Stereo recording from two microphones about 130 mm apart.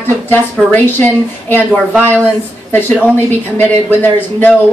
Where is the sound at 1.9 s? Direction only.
15° right (ahead or behind).